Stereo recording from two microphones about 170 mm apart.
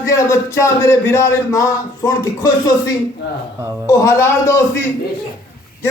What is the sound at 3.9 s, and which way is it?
Speech, 15° left (ahead or behind).